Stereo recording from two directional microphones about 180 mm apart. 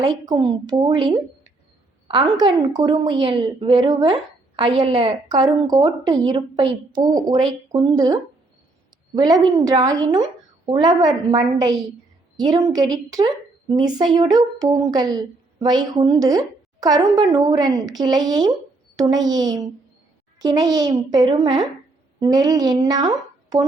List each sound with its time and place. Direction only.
0.3 s a woman's voice: 25° right (ahead or behind)
6.9 s speech: 45° right (ahead or behind)
7.2 s a woman's voice: 20° right (ahead or behind)